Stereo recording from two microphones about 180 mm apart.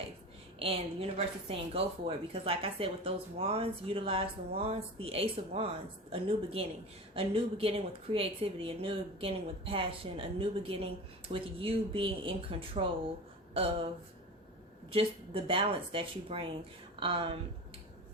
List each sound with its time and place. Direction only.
0.6 s a woman's voice: 30° right (ahead or behind)
14.9 s a woman's voice: 30° right (ahead or behind)